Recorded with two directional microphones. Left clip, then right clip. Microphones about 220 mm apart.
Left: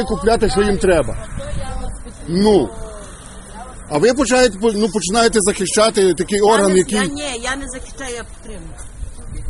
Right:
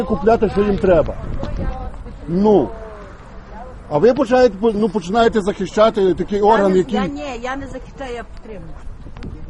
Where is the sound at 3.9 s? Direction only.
10° left (ahead or behind).